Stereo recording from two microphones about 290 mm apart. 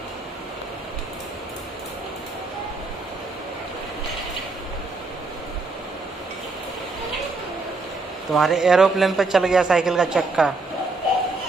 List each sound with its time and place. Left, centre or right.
8.3 s a man's voice: centre